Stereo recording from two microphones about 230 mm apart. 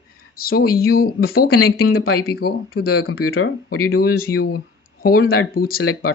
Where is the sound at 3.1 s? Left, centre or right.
Left.